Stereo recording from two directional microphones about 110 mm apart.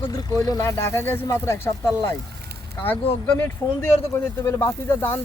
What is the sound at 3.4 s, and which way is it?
Speech, 20° left (ahead or behind).